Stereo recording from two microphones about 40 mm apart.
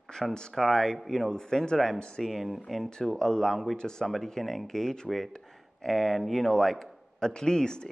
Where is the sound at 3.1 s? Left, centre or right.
Centre.